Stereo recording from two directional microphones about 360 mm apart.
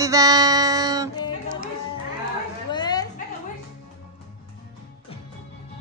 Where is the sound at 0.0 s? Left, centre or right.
Centre.